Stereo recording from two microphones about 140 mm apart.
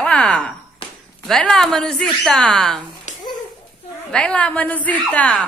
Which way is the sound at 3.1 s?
55° left (ahead or behind).